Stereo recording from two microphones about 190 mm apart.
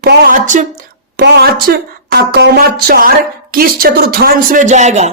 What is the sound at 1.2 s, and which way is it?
A woman's voice, 60° right (ahead or behind).